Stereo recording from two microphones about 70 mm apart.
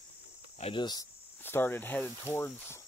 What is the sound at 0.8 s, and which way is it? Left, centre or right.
Speech, left.